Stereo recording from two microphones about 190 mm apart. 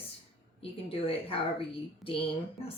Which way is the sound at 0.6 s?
30° left (ahead or behind).